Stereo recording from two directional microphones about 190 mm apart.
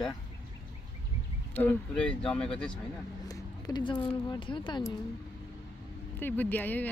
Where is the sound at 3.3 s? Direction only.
20° left (ahead or behind).